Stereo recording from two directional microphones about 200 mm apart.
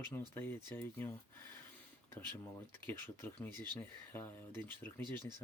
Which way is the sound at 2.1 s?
10° left (ahead or behind).